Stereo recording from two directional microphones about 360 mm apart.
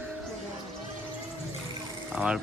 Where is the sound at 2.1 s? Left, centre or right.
Centre.